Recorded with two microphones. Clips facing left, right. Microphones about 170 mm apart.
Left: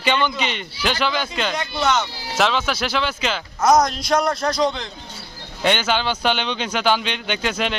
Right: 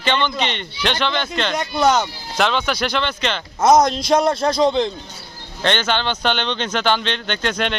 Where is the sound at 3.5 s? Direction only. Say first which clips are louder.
Right 3 dB; 20° right (ahead or behind).